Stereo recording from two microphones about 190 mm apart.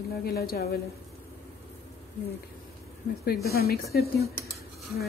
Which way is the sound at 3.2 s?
55° left (ahead or behind).